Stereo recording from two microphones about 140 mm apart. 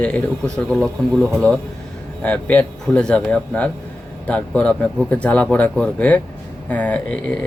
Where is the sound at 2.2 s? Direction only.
10° left (ahead or behind).